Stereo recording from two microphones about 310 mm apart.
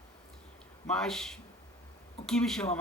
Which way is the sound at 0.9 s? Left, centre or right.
Centre.